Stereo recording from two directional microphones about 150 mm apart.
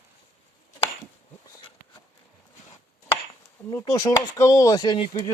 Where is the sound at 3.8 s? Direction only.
25° left (ahead or behind).